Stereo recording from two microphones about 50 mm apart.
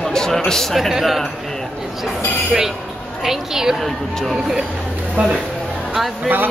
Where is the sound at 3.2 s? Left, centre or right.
Centre.